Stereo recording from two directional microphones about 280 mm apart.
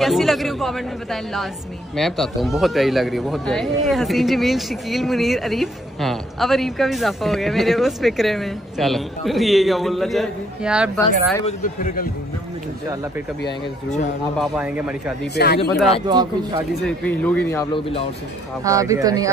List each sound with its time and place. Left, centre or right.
0.0 s speech: centre
11.4 s a man's voice: left
13.5 s a man's voice: left
14.4 s speech: centre
15.3 s speech: left
16.1 s speech: centre
16.8 s speech: centre
18.6 s speech: centre